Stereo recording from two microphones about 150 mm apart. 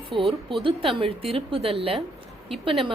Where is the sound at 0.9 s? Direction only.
40° right (ahead or behind).